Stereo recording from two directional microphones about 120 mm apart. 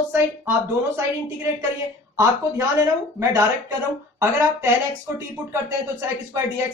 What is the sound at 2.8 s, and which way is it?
Speech, 25° right (ahead or behind).